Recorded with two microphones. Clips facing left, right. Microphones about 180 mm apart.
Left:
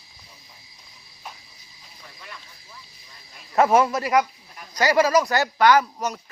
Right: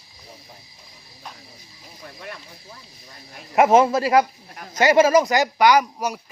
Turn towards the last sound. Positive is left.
turn(degrees=-10)  # may be behind; listen again after turning